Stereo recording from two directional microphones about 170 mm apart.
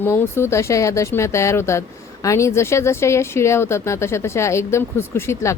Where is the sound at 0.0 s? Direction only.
15° left (ahead or behind).